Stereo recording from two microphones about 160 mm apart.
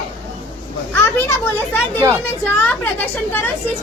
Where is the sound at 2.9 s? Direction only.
10° left (ahead or behind).